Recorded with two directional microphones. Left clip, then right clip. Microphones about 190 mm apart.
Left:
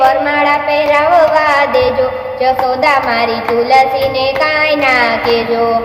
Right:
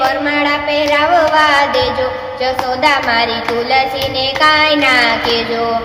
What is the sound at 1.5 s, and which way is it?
Music, 10° right (ahead or behind).